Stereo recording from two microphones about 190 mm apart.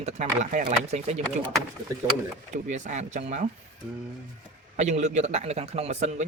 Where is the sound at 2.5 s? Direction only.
40° right (ahead or behind).